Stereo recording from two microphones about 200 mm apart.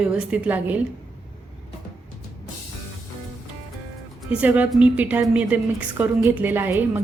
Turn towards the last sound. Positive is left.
turn(degrees=-10)  # may be behind; listen again after turning